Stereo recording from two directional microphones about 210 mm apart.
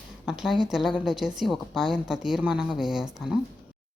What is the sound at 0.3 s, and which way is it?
A woman's voice, centre (ahead or behind).